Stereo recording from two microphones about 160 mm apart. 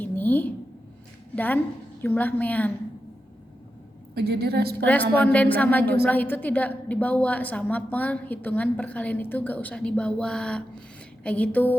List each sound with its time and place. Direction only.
0.0 s a sound: 10° left (ahead or behind)
1.4 s a woman's voice: 10° left (ahead or behind)
4.1 s a woman's voice: 85° right
5.1 s a woman's voice: 10° left (ahead or behind)